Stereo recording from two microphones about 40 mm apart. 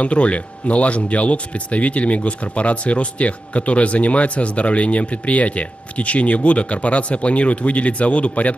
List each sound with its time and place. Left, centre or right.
0.0 s speech: left